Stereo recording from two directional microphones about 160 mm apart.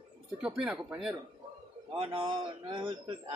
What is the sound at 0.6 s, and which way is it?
Speech, 5° right (ahead or behind).